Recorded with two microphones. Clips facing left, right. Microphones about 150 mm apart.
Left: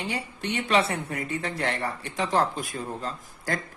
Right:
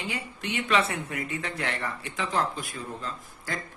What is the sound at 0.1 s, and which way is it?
Speech, 35° left (ahead or behind).